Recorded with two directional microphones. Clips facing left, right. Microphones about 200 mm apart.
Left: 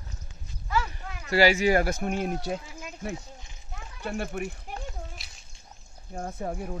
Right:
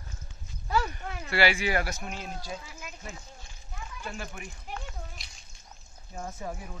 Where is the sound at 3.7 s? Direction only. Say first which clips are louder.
Left 6 dB; 60° left (ahead or behind).